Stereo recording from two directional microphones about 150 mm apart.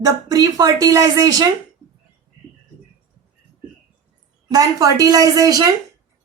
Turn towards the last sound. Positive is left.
turn(degrees=-25)  # may be behind; listen again after turning